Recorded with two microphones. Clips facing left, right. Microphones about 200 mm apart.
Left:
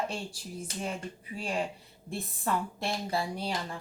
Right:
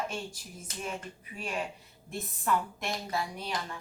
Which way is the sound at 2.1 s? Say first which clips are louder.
Right 1 dB; 30° left (ahead or behind).